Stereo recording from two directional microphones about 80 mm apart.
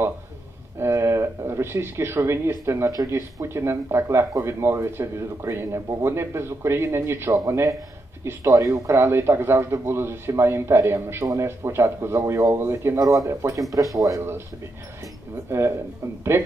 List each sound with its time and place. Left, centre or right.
0.7 s a man's voice: right
13.0 s speech: right
15.5 s a man's voice: right